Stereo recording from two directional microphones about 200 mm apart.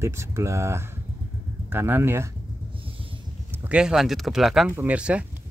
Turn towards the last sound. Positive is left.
turn(degrees=-5)  # may be behind; listen again after turning